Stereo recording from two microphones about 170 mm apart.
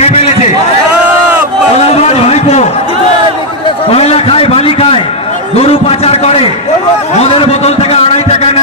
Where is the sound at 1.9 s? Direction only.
40° left (ahead or behind).